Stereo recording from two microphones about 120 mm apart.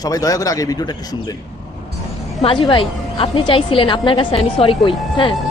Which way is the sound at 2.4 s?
45° left (ahead or behind).